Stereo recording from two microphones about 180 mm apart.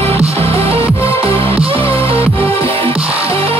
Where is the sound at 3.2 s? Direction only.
30° right (ahead or behind).